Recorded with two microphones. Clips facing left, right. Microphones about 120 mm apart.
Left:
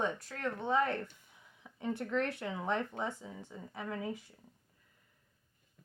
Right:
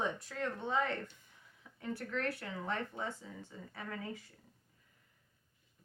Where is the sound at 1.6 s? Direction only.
20° left (ahead or behind).